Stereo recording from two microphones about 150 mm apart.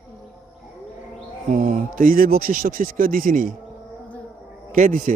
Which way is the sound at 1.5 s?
70° right (ahead or behind).